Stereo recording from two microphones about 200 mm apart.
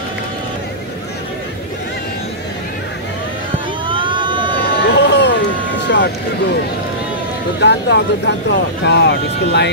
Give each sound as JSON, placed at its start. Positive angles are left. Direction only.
{"t": 3.8, "sound": "vehicle", "side_deg": -25}
{"t": 4.6, "sound": "vehicle", "side_deg": 50}
{"t": 7.6, "sound": "speech", "side_deg": 60}